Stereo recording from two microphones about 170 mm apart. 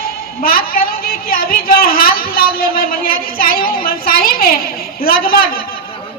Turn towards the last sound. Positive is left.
turn(degrees=60)  # may be behind; listen again after turning